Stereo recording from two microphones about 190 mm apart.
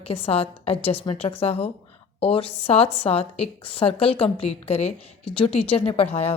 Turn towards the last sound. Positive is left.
turn(degrees=35)  # may be behind; listen again after turning